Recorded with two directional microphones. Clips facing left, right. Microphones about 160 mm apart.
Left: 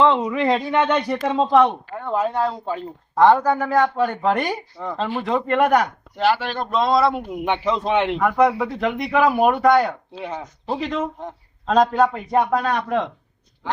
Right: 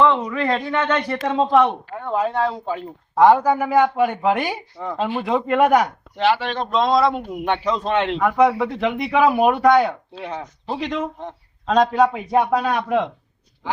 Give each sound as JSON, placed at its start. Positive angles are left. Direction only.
{"t": 0.0, "sound": "speech", "side_deg": 20}
{"t": 8.2, "sound": "speech", "side_deg": 0}